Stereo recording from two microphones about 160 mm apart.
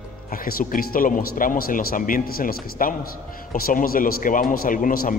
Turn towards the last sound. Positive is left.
turn(degrees=60)  # may be behind; listen again after turning